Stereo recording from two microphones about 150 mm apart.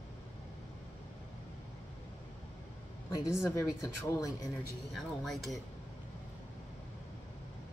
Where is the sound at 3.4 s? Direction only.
20° left (ahead or behind).